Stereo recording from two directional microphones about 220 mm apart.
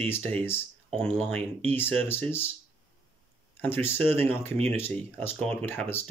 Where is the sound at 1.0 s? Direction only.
30° right (ahead or behind).